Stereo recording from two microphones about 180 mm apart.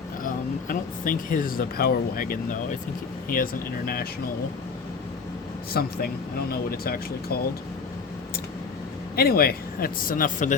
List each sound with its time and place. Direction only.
0.7 s speech: 50° left (ahead or behind)
5.7 s speech: 60° left (ahead or behind)
9.1 s speech: 55° left (ahead or behind)